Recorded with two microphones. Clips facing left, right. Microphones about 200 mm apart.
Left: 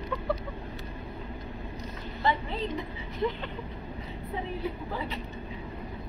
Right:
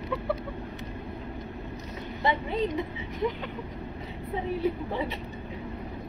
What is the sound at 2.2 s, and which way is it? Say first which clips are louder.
Speech: right 1 dB; 15° right (ahead or behind).